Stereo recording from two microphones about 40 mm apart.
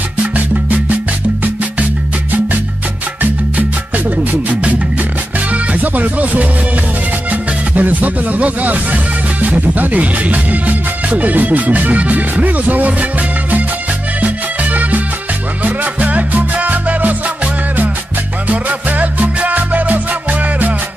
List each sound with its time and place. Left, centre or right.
0.2 s music: right
4.2 s music: right
7.2 s speech: right
14.2 s music: right
18.5 s music: right